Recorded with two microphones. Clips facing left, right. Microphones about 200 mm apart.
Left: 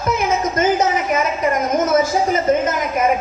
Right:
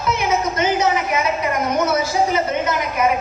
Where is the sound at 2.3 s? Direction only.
45° left (ahead or behind).